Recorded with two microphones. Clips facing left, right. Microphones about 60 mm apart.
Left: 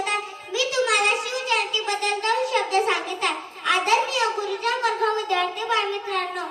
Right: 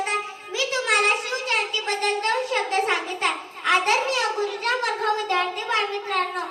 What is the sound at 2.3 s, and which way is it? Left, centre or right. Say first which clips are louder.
A child's voice: left 2 dB; right.